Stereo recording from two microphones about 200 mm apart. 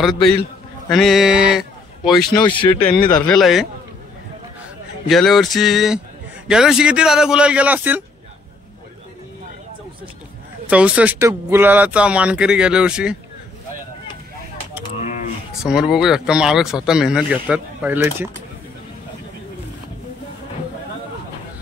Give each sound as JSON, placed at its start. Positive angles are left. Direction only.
{"t": 0.8, "sound": "speech", "side_deg": 0}
{"t": 2.4, "sound": "speech", "side_deg": 25}
{"t": 3.1, "sound": "speech", "side_deg": 5}
{"t": 5.0, "sound": "speech", "side_deg": 0}
{"t": 10.7, "sound": "speech", "side_deg": -5}
{"t": 15.0, "sound": "a sound", "side_deg": 35}
{"t": 15.6, "sound": "speech", "side_deg": 0}